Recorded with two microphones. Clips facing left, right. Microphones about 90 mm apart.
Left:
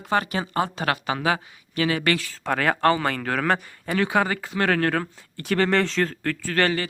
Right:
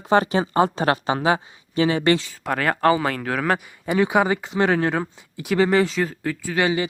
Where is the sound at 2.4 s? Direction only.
Centre (ahead or behind).